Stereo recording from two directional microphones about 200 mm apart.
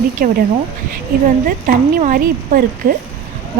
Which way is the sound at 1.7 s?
45° right (ahead or behind).